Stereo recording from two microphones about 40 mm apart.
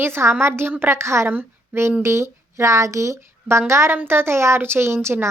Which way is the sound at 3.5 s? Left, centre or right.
Right.